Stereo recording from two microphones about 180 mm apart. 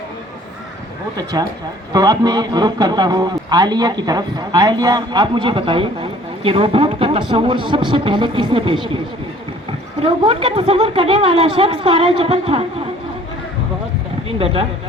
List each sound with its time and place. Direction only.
1.1 s a man's voice: 20° right (ahead or behind)
10.0 s a man's voice: 30° right (ahead or behind)
14.3 s speech: 30° right (ahead or behind)